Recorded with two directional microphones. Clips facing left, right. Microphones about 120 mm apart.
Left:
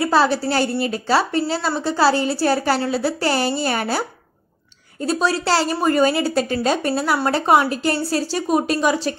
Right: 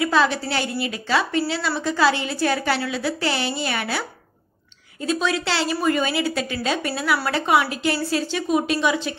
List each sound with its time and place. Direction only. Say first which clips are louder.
0.0 s a woman's voice: left 3 dB; 35° left (ahead or behind)
5.0 s a woman's voice: left 3 dB; 35° left (ahead or behind)